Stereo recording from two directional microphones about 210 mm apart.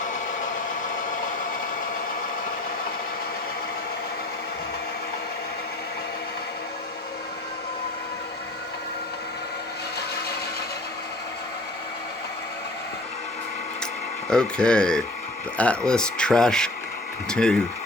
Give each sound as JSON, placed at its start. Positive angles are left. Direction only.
{"t": 0.0, "sound": "vehicle", "side_deg": 35}
{"t": 14.3, "sound": "speech", "side_deg": 5}